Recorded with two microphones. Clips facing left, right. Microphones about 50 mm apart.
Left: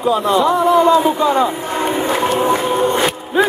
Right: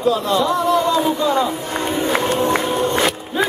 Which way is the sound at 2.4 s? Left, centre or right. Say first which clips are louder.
Left 3 dB; centre.